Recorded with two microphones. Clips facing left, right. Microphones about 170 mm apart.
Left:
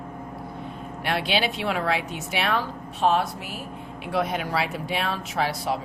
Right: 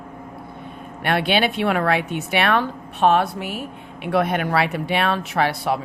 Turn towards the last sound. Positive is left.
turn(degrees=-65)  # may be behind; listen again after turning